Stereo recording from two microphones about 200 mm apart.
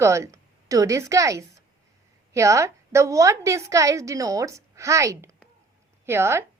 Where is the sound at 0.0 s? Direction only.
15° right (ahead or behind).